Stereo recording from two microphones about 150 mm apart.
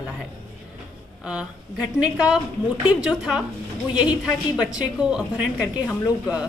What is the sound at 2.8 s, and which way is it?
A woman's voice, 5° right (ahead or behind).